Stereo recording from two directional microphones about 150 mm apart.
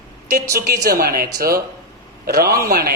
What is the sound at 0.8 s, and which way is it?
A man's voice, 85° right.